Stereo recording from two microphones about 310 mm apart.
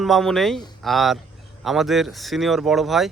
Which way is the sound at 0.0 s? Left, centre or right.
Centre.